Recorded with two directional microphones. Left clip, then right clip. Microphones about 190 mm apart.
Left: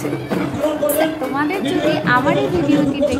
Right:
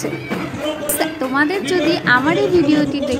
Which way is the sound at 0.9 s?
25° right (ahead or behind).